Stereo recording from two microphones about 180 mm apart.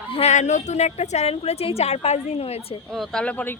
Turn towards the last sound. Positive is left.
turn(degrees=5)  # may be behind; listen again after turning